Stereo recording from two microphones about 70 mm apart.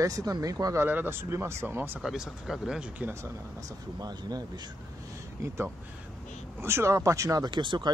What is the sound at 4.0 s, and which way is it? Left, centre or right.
Speech, right.